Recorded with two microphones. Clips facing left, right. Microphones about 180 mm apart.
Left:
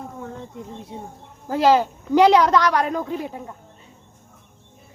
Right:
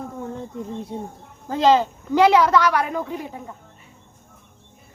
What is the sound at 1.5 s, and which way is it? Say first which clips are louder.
A woman's voice: even; 10° left (ahead or behind).